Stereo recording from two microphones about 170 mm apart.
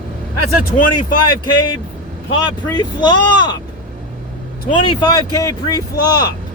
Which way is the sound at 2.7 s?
25° left (ahead or behind).